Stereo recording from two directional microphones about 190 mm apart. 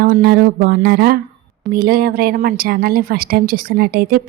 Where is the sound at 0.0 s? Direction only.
50° right (ahead or behind).